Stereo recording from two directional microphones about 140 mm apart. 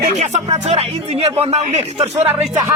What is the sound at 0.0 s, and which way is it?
Speech, 60° right (ahead or behind).